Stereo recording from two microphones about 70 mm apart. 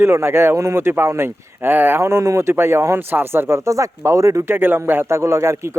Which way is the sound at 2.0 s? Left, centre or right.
Right.